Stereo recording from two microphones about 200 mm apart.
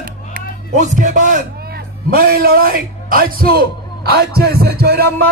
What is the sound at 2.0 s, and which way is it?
A man's voice, 45° right (ahead or behind).